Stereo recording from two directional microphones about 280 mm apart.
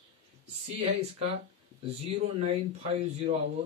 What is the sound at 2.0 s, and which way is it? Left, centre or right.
Speech, right.